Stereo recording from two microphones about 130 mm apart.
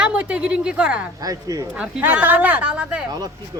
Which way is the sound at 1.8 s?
10° right (ahead or behind).